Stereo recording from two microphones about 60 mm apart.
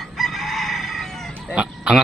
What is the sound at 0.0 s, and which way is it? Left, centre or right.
Chicken, centre.